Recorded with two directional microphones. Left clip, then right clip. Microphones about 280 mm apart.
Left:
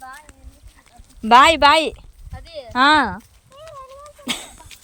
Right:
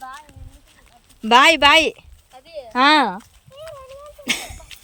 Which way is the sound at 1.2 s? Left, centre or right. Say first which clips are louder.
Left 1 dB; centre.